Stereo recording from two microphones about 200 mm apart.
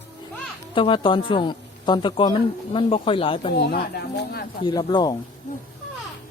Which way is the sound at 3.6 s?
55° left (ahead or behind).